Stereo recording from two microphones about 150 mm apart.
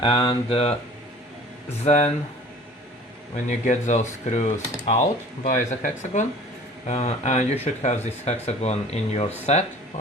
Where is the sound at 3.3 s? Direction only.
55° left (ahead or behind).